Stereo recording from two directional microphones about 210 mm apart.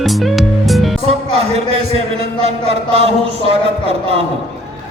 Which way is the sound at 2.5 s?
30° right (ahead or behind).